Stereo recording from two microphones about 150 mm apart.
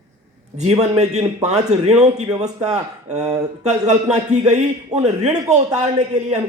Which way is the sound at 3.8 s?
50° right (ahead or behind).